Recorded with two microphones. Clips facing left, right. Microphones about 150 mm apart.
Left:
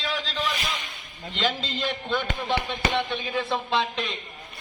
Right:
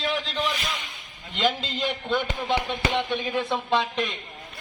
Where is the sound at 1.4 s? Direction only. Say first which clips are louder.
Right 2 dB; 10° right (ahead or behind).